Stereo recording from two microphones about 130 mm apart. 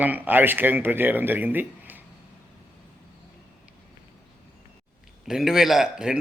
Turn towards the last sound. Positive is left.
turn(degrees=-5)  # may be behind; listen again after turning